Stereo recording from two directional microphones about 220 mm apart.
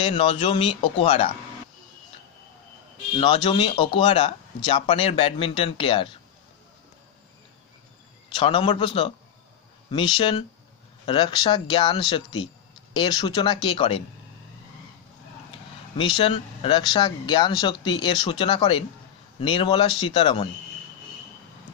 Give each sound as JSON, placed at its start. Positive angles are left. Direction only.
{"t": 0.0, "sound": "speech", "side_deg": 25}
{"t": 3.2, "sound": "speech", "side_deg": 25}
{"t": 8.4, "sound": "speech", "side_deg": 25}
{"t": 16.0, "sound": "speech", "side_deg": 25}